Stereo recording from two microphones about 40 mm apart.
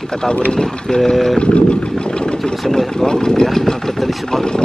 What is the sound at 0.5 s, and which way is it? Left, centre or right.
Speech, centre.